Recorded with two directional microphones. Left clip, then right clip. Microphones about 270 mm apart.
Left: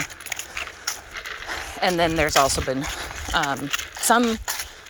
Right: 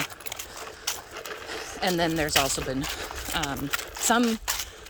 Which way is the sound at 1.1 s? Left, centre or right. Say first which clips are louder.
Left 4 dB; right.